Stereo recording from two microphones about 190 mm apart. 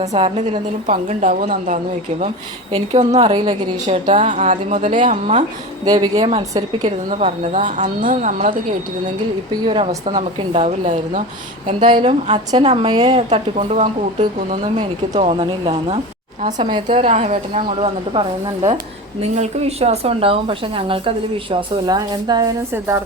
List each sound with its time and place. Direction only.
0.1 s a woman's voice: 35° right (ahead or behind)
2.7 s a woman's voice: 35° right (ahead or behind)
3.8 s a woman's voice: 40° right (ahead or behind)
5.8 s speech: 20° right (ahead or behind)
7.1 s a woman's voice: 35° right (ahead or behind)
9.6 s a woman's voice: 30° right (ahead or behind)
11.8 s a woman's voice: 25° right (ahead or behind)
15.1 s speech: 30° right (ahead or behind)
16.4 s a woman's voice: 40° right (ahead or behind); by 23.0 s 15° right (ahead or behind)